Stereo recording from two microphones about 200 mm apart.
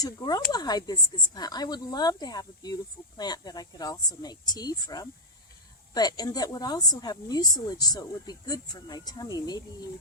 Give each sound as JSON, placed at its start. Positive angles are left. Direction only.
{"t": 0.0, "sound": "speech", "side_deg": 20}